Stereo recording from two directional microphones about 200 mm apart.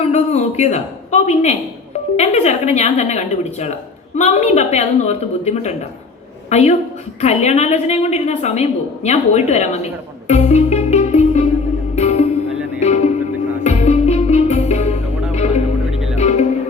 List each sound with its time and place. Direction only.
0.0 s a woman's voice: 30° left (ahead or behind)
10.2 s music: 35° left (ahead or behind)
15.9 s music: centre (ahead or behind)
16.1 s music: 35° left (ahead or behind)